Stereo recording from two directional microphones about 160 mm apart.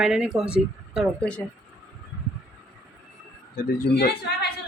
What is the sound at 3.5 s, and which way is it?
Speech, 75° left (ahead or behind).